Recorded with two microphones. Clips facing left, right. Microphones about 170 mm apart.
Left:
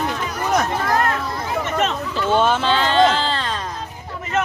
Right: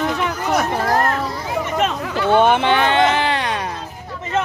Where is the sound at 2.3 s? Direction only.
60° right (ahead or behind).